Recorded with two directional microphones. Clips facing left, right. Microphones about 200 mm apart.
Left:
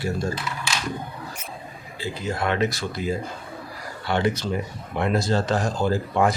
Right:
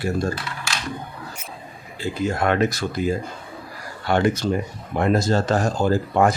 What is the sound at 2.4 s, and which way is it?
Speech, 50° right (ahead or behind).